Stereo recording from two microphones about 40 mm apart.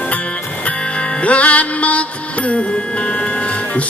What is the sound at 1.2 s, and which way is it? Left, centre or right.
Music, left.